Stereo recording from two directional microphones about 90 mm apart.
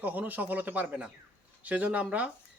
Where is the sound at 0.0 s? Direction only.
20° right (ahead or behind).